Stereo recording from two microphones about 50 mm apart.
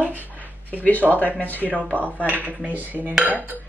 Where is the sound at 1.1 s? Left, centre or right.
Left.